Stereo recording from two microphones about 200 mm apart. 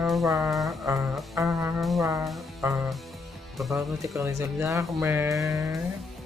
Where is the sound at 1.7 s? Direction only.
Centre (ahead or behind).